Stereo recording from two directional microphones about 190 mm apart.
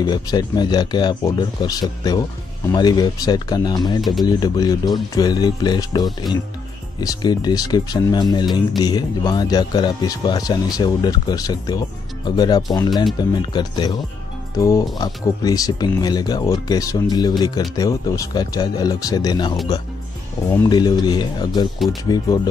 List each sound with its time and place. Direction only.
0.0 s speech: 20° left (ahead or behind)
4.0 s speech: centre (ahead or behind)
4.3 s speech: 20° left (ahead or behind)